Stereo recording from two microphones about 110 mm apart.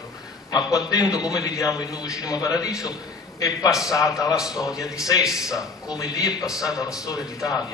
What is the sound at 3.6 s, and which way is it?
A man's voice, 5° right (ahead or behind).